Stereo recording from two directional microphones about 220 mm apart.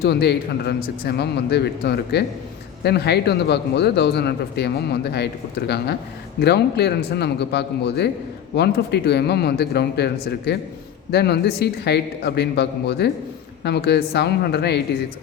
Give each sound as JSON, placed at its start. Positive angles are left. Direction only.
{"t": 0.0, "sound": "speech", "side_deg": 45}